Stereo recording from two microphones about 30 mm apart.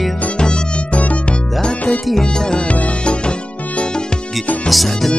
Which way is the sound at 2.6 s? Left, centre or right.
Left.